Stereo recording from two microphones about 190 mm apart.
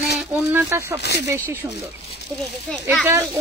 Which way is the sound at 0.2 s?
10° right (ahead or behind).